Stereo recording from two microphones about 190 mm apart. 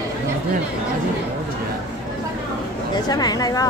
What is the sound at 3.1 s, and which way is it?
Speech, 20° left (ahead or behind).